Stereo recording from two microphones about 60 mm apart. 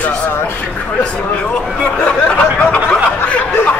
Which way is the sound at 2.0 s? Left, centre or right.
Left.